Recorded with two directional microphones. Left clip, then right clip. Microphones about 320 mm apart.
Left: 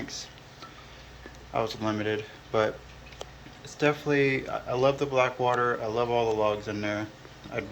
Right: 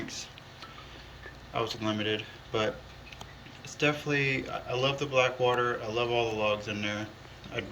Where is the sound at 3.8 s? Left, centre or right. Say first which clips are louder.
Left 4 dB; centre.